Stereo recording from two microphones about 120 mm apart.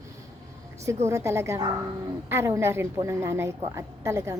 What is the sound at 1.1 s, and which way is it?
A woman's voice, 25° right (ahead or behind).